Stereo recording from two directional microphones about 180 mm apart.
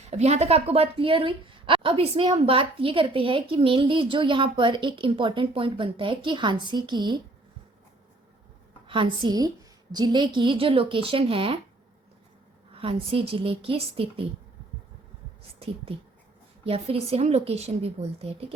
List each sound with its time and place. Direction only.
0.0 s speech: 40° right (ahead or behind)
8.9 s speech: 30° right (ahead or behind)
12.7 s a woman's voice: 30° right (ahead or behind)
15.5 s a woman's voice: 30° right (ahead or behind)